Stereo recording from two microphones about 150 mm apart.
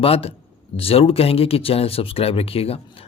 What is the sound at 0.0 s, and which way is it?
Speech, 40° left (ahead or behind).